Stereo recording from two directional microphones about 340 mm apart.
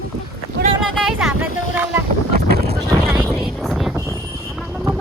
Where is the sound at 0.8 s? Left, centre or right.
Centre.